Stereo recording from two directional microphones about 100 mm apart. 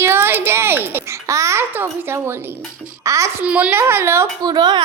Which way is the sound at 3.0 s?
30° right (ahead or behind).